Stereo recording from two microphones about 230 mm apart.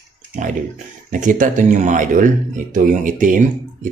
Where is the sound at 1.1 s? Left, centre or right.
Right.